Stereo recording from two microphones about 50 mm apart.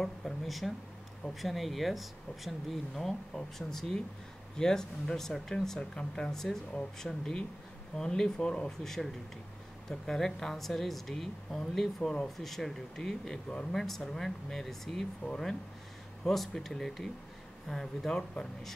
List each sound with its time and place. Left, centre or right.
0.0 s a sound: centre
1.4 s speech: centre
13.5 s speech: left
13.7 s speech: centre